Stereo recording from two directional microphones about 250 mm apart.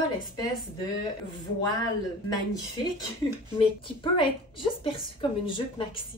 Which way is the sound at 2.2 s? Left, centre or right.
Centre.